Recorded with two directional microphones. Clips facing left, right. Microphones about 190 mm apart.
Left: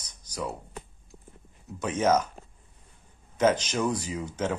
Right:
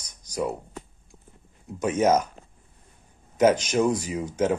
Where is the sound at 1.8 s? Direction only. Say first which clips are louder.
Right 3 dB; 10° right (ahead or behind).